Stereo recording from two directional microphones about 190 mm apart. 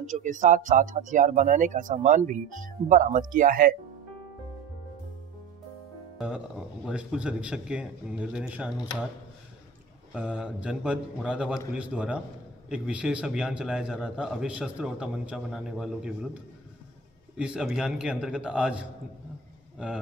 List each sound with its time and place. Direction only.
0.0 s speech: 40° right (ahead or behind)
6.1 s a man's voice: 5° right (ahead or behind)
10.1 s a man's voice: 5° right (ahead or behind)
17.4 s a man's voice: 5° right (ahead or behind)